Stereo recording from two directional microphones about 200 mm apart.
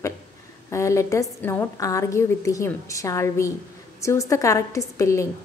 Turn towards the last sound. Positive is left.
turn(degrees=15)  # may be behind; listen again after turning